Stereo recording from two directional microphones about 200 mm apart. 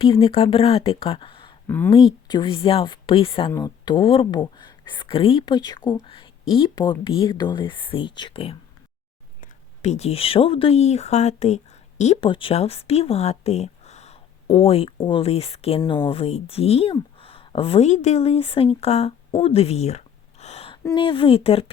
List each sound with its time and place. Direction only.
0.0 s speech: 25° left (ahead or behind)
1.6 s speech: 10° left (ahead or behind)
1.9 s speech: 25° left (ahead or behind)
20.4 s a sound: 30° left (ahead or behind)
20.8 s speech: 25° left (ahead or behind)